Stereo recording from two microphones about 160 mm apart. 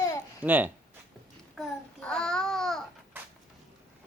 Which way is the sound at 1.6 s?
5° left (ahead or behind).